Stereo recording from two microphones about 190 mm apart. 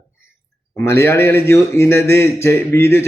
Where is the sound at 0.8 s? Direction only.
15° left (ahead or behind).